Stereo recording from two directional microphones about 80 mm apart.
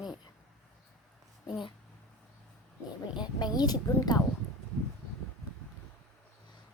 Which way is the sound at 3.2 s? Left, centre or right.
Left.